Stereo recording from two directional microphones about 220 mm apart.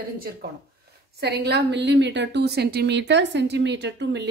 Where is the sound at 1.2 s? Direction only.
45° right (ahead or behind).